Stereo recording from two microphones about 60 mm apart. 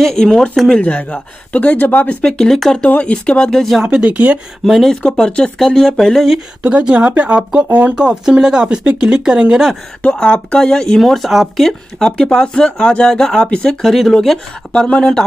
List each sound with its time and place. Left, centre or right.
0.0 s speech: centre
0.7 s speech: centre
2.2 s speech: centre
2.8 s speech: left
3.9 s speech: right
4.6 s speech: centre
5.0 s speech: centre
5.6 s speech: centre
6.6 s speech: right
10.2 s speech: centre
14.7 s speech: centre